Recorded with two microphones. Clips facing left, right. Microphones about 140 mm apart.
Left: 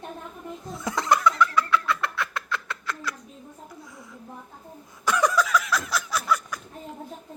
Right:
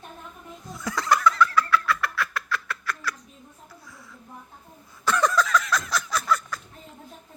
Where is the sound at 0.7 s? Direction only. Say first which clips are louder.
Left 1 dB; 25° left (ahead or behind).